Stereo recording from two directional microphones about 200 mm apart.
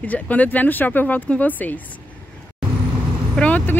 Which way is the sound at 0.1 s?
10° left (ahead or behind).